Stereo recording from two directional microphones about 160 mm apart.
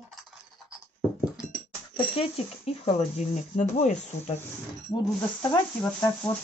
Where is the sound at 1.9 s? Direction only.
35° left (ahead or behind).